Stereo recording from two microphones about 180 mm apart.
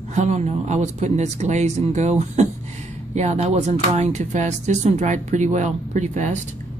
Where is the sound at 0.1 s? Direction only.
40° right (ahead or behind).